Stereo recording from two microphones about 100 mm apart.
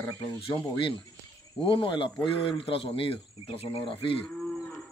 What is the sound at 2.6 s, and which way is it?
Speech, 65° left (ahead or behind).